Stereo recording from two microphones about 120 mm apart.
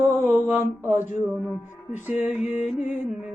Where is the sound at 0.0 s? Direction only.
20° right (ahead or behind).